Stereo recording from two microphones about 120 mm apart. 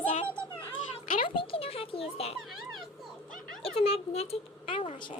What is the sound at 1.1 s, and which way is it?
Speech, 50° left (ahead or behind).